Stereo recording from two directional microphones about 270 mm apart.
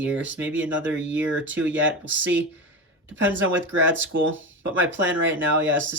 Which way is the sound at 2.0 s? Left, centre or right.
Right.